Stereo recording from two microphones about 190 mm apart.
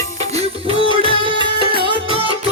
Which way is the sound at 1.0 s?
25° right (ahead or behind).